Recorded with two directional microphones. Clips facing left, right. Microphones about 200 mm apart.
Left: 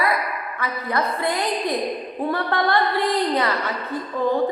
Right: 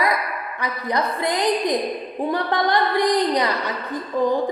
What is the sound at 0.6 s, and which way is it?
A woman's voice, 15° right (ahead or behind).